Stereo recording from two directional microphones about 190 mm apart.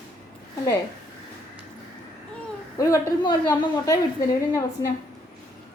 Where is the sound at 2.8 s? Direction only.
20° left (ahead or behind).